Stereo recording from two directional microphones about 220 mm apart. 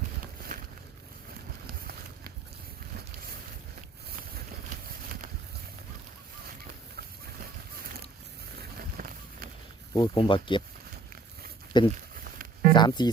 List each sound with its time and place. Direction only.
0.5 s a sound: 40° right (ahead or behind)
8.8 s run: 40° right (ahead or behind)
9.9 s speech: 20° left (ahead or behind)
11.7 s speech: 20° left (ahead or behind)
12.1 s a sound: 40° right (ahead or behind)
12.7 s speech: 20° left (ahead or behind)